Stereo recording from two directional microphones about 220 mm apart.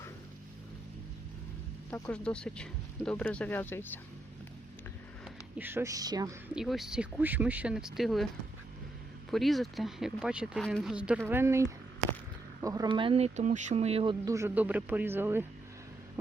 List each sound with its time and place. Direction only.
1.9 s speech: 5° left (ahead or behind)
5.2 s speech: 10° right (ahead or behind)
6.5 s speech: centre (ahead or behind)
9.3 s speech: centre (ahead or behind)